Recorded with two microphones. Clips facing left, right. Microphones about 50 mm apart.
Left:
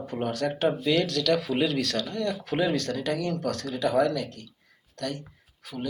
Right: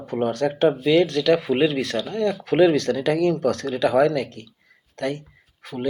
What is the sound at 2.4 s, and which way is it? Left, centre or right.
Speech, right.